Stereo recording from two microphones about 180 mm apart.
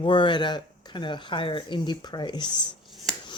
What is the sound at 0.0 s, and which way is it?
Speech, 25° left (ahead or behind).